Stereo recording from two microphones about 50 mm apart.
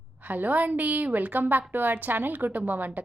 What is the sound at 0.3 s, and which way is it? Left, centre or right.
A woman's voice, right.